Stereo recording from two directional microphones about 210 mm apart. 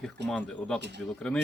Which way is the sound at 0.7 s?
55° right (ahead or behind).